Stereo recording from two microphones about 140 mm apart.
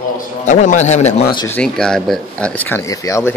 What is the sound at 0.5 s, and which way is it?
Speech, 60° left (ahead or behind).